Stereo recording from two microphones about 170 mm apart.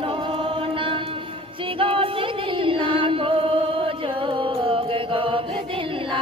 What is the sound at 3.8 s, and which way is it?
Chant, 30° right (ahead or behind).